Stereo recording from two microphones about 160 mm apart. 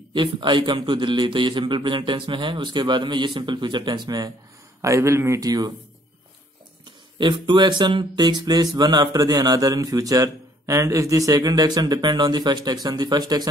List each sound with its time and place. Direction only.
0.1 s speech: 30° right (ahead or behind)
7.2 s speech: 30° right (ahead or behind)